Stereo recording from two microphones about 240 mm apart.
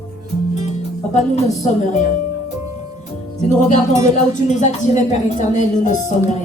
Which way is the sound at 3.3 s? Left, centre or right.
Left.